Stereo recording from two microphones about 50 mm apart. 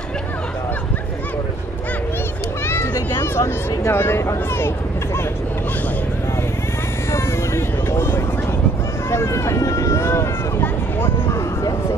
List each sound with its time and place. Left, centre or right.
2.6 s a sound: left
3.2 s speech: left
7.1 s vehicle: left
9.1 s vehicle: left